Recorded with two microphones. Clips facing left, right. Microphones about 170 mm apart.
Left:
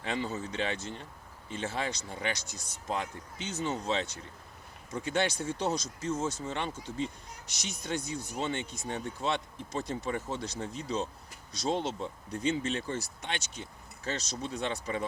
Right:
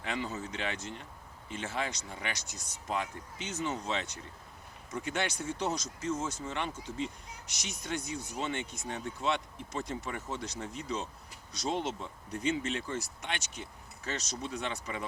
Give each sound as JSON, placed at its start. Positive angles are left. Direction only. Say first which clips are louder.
{"t": 0.0, "sound": "speech", "louder": "left 2 dB", "side_deg": 30}
{"t": 5.0, "sound": "speech", "louder": "left 4 dB", "side_deg": 30}